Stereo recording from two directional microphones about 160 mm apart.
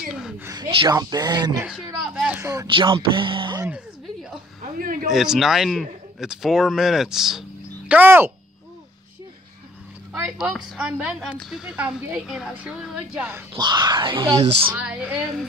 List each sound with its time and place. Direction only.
0.0 s a sound: 5° right (ahead or behind)
0.6 s speech: 25° right (ahead or behind)
2.1 s speech: 5° right (ahead or behind)
2.4 s speech: 25° right (ahead or behind)
3.6 s a sound: 5° right (ahead or behind)
4.7 s speech: 60° right (ahead or behind)
5.1 s a woman's voice: 5° right (ahead or behind)
10.1 s a woman's voice: 5° right (ahead or behind)
13.5 s speech: 30° right (ahead or behind)
14.8 s speech: 5° right (ahead or behind)